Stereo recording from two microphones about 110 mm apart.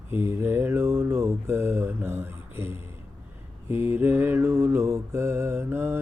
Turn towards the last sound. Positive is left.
turn(degrees=-20)  # may be behind; listen again after turning